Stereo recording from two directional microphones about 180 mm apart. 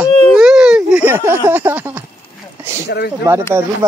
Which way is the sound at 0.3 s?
5° right (ahead or behind).